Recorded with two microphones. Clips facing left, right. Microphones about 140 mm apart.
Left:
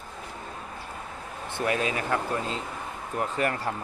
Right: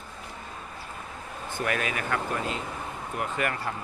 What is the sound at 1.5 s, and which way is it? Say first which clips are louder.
Speech: left 2 dB; 25° left (ahead or behind).